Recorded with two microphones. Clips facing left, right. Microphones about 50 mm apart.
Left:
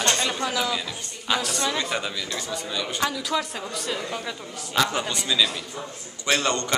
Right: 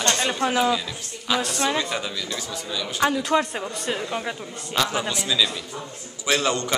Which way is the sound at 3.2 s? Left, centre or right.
Right.